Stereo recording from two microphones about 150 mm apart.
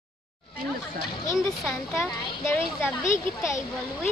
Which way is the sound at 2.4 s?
15° left (ahead or behind).